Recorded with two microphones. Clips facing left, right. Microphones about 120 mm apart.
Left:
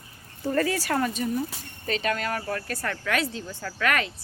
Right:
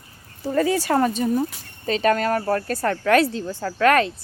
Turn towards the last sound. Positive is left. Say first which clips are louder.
# right 9 dB
turn(degrees=-35)  # may be behind; listen again after turning